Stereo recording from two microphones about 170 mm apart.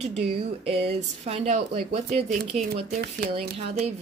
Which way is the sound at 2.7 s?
65° right (ahead or behind).